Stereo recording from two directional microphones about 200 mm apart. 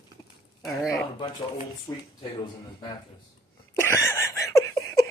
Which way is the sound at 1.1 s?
25° left (ahead or behind).